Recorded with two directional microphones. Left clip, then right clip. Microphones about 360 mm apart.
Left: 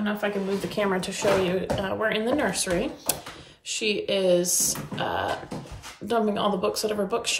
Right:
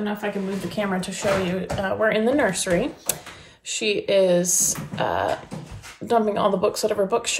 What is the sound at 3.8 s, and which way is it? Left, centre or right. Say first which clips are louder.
Speech: right 5 dB; centre.